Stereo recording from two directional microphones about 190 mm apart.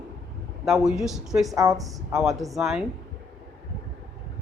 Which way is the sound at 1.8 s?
Centre (ahead or behind).